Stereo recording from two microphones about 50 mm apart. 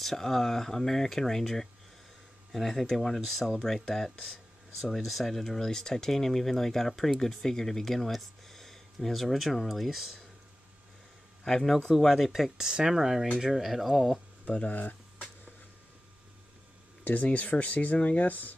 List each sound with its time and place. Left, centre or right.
0.0 s speech: centre
11.4 s speech: centre
12.0 s speech: centre
14.5 s speech: left
14.8 s a sound: left
17.0 s speech: left